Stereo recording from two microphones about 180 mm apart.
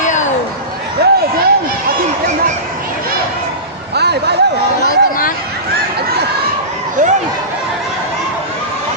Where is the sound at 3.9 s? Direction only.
65° right (ahead or behind).